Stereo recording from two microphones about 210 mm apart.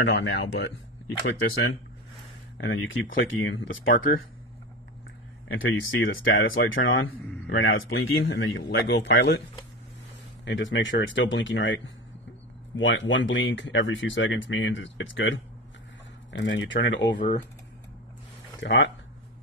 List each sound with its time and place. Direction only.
0.0 s speech: 55° left (ahead or behind)
2.5 s speech: 60° left (ahead or behind)
5.5 s speech: 70° left (ahead or behind)
8.4 s speech: 60° left (ahead or behind)
10.4 s speech: 60° left (ahead or behind)
18.6 s speech: 60° left (ahead or behind)